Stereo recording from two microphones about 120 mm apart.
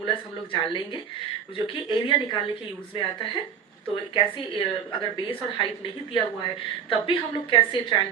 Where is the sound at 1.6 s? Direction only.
45° left (ahead or behind).